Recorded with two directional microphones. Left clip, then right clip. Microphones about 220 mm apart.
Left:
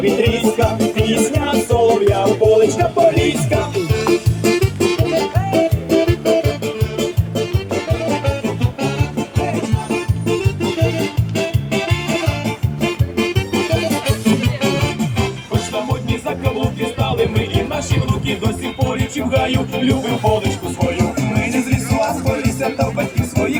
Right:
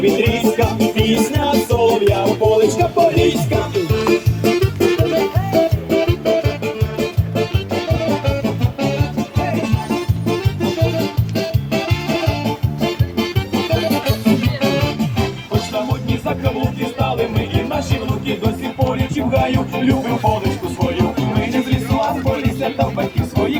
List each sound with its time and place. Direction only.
0.0 s music: 25° left (ahead or behind)
3.9 s music: 50° left (ahead or behind)
7.9 s music: 40° left (ahead or behind)